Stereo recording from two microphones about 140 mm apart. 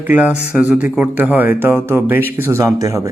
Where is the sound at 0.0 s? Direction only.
10° right (ahead or behind).